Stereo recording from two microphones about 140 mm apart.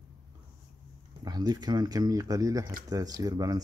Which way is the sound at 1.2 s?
30° right (ahead or behind).